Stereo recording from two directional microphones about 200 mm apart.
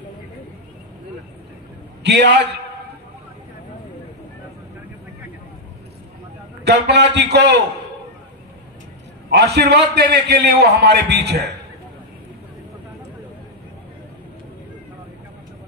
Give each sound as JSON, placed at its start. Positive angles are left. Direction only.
{"t": 2.0, "sound": "a man's voice", "side_deg": -60}
{"t": 6.6, "sound": "a man's voice", "side_deg": -55}
{"t": 9.3, "sound": "a man's voice", "side_deg": -55}